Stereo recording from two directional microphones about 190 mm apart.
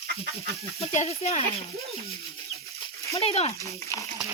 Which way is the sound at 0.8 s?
35° left (ahead or behind).